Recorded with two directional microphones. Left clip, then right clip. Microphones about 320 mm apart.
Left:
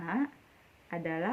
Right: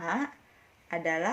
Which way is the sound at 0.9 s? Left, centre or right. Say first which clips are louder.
Right 5 dB; centre.